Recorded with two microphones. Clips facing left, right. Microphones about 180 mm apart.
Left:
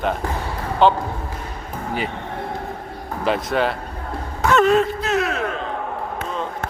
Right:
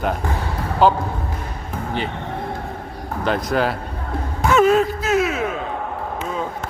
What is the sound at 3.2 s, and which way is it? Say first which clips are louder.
Speech: even; centre (ahead or behind).